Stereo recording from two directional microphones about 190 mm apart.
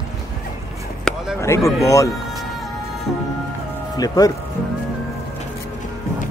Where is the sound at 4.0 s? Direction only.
20° left (ahead or behind).